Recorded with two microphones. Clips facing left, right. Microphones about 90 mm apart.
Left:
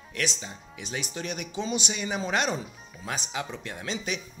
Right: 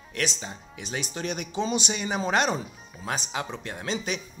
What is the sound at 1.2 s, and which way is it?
Speech, 40° right (ahead or behind).